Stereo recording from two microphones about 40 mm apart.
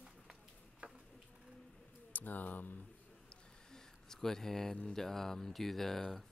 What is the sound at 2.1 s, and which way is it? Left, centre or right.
Speech, left.